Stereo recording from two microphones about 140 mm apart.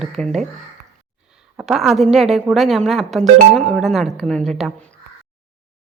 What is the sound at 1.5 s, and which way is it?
A woman's voice, centre (ahead or behind).